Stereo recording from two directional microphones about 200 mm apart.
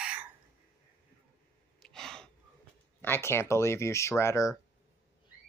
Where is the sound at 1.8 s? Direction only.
Centre (ahead or behind).